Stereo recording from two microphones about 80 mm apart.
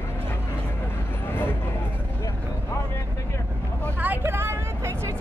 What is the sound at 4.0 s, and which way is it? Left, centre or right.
Vehicle, right.